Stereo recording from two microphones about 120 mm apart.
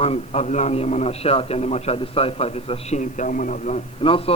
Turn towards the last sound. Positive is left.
turn(degrees=50)  # may be behind; listen again after turning